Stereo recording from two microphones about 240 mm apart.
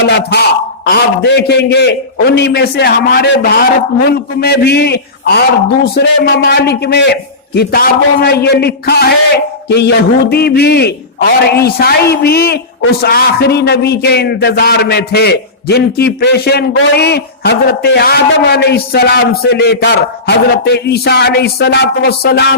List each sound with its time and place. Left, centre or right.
0.1 s a man's voice: left